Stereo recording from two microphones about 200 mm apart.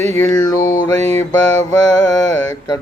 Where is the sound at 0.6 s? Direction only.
45° left (ahead or behind).